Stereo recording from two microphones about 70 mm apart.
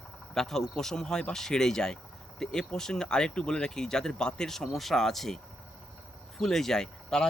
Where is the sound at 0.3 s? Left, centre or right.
Centre.